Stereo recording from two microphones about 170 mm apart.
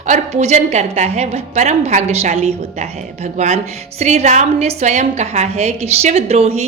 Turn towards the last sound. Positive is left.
turn(degrees=-40)  # may be behind; listen again after turning